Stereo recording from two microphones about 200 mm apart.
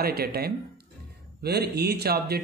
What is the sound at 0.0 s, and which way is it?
Speech, 50° right (ahead or behind).